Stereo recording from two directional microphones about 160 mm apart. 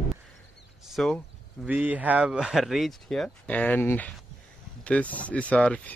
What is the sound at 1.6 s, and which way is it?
Speech, 10° right (ahead or behind).